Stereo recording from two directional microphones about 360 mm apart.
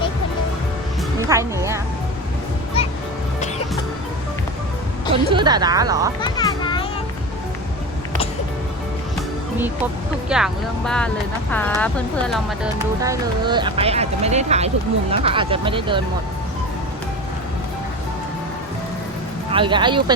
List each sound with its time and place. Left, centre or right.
1.3 s speech: centre
5.1 s speech: centre
6.2 s music: centre
10.2 s speech: centre
13.0 s speech: centre
19.5 s speech: centre